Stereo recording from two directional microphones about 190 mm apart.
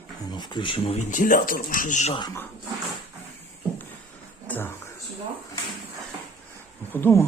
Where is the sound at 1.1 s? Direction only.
45° left (ahead or behind).